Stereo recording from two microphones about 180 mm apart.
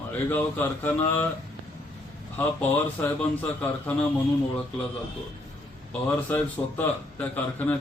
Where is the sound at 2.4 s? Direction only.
10° left (ahead or behind).